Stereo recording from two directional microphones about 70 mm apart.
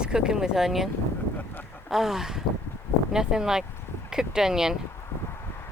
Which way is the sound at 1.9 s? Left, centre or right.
Centre.